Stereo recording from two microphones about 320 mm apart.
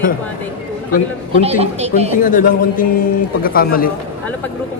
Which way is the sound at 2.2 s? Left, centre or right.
Left.